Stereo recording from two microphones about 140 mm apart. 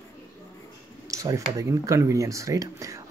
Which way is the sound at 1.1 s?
20° right (ahead or behind).